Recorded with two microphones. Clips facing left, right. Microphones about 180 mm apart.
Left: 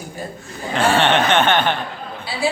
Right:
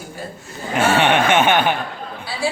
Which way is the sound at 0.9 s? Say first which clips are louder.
Right 1 dB; 10° right (ahead or behind).